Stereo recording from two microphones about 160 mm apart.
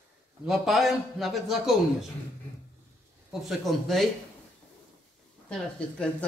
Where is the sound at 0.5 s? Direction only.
Centre (ahead or behind).